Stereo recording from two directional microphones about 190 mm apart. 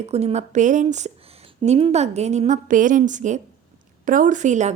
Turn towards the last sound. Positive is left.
turn(degrees=-40)  # may be behind; listen again after turning